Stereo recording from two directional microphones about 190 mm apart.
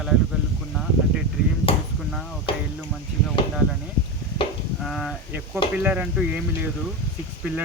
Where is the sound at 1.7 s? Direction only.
30° left (ahead or behind).